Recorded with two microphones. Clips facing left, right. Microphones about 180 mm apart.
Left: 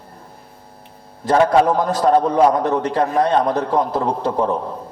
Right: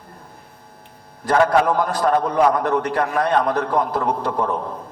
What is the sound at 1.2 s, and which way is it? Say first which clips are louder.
A man's voice: left 2 dB; 20° left (ahead or behind).